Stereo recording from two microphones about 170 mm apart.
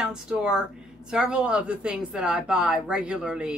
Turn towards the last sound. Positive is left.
turn(degrees=-5)  # may be behind; listen again after turning